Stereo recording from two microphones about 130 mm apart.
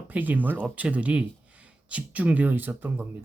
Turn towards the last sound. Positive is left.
turn(degrees=-15)  # may be behind; listen again after turning